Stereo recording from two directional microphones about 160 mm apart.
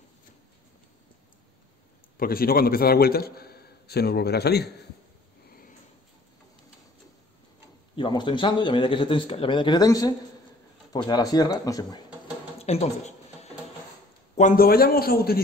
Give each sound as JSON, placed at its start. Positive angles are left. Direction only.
{"t": 2.1, "sound": "a man's voice", "side_deg": 65}
{"t": 7.9, "sound": "speech", "side_deg": 30}
{"t": 12.6, "sound": "a sound", "side_deg": 40}
{"t": 14.6, "sound": "a man's voice", "side_deg": 70}